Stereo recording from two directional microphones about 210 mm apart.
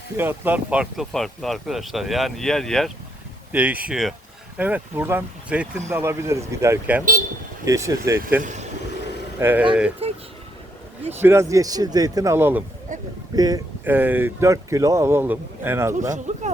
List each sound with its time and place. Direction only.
0.2 s speech: 10° right (ahead or behind)
9.4 s speech: 10° right (ahead or behind)
10.0 s a sound: 25° right (ahead or behind)
11.2 s speech: 10° right (ahead or behind)
12.9 s a man's voice: 35° right (ahead or behind)
13.3 s speech: 20° right (ahead or behind)
16.1 s speech: 35° right (ahead or behind)